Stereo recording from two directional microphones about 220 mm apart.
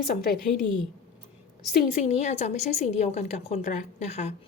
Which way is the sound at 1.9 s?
30° left (ahead or behind).